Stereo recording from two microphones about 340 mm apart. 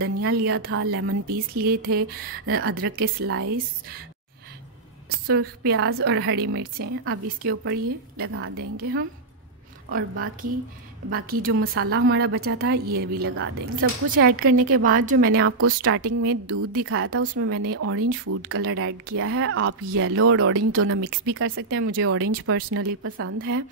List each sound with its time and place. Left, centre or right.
0.0 s a woman's voice: right
5.2 s a woman's voice: right
5.6 s a woman's voice: right
11.1 s a woman's voice: right
11.6 s a woman's voice: right
13.3 s a woman's voice: right
14.5 s a woman's voice: right
14.8 s a woman's voice: right
15.3 s a woman's voice: right
18.6 s a woman's voice: right